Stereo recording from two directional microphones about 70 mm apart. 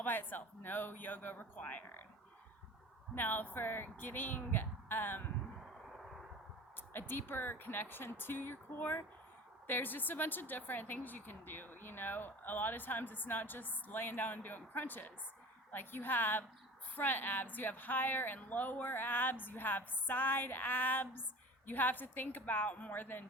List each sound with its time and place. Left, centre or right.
0.0 s speech: left
3.2 s speech: left
7.1 s speech: left